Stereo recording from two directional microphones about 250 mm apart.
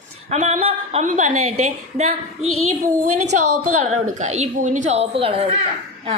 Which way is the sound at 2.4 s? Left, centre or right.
Right.